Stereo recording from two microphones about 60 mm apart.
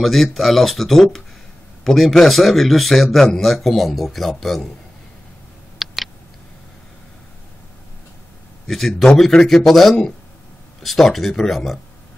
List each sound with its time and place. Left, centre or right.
0.0 s speech: centre
5.8 s a sound: centre
8.6 s speech: centre